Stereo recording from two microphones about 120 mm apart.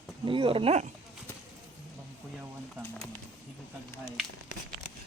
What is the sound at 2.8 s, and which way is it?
Bird, 10° left (ahead or behind).